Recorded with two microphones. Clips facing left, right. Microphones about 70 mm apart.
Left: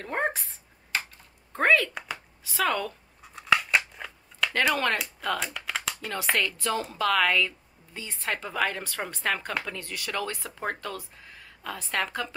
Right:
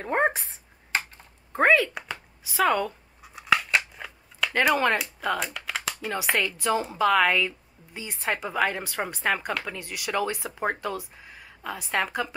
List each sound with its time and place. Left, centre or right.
0.0 s speech: right
1.5 s speech: centre
3.2 s scissors: centre
4.6 s speech: centre